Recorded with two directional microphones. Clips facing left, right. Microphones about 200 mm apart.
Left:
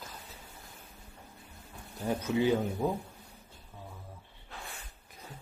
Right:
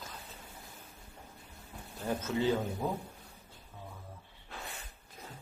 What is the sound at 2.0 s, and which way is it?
Speech, 15° left (ahead or behind).